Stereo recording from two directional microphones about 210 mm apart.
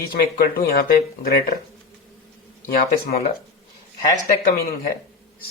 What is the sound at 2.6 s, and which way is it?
Speech, 45° left (ahead or behind).